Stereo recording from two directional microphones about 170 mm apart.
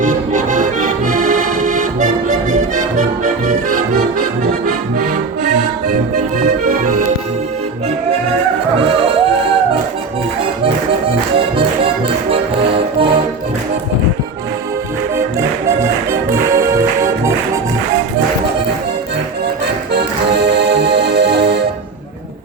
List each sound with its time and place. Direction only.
0.0 s accordion: 45° right (ahead or behind)
6.4 s accordion: 45° right (ahead or behind)
12.3 s music: 30° right (ahead or behind)
15.1 s music: 15° right (ahead or behind)
19.9 s accordion: 75° right (ahead or behind)